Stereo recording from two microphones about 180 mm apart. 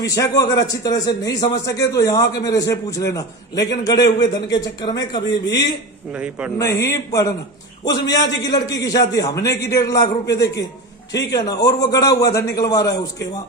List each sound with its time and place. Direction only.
0.0 s a man's voice: 20° left (ahead or behind)
6.1 s a man's voice: 5° right (ahead or behind)
6.6 s a man's voice: 15° left (ahead or behind)